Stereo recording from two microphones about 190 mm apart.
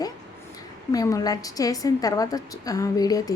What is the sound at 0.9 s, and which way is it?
A woman's voice, 15° left (ahead or behind).